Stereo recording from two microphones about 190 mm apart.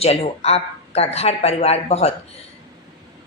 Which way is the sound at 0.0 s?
30° left (ahead or behind).